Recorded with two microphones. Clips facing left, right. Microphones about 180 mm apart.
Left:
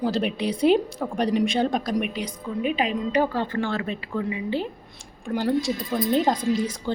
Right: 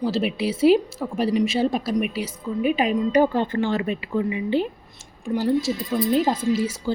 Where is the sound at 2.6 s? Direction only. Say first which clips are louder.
Right 4 dB; 40° right (ahead or behind).